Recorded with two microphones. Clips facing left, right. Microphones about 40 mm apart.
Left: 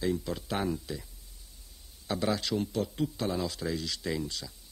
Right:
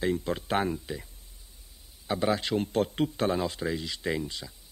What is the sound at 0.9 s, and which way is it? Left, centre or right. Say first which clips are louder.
Speech: right 2 dB; right.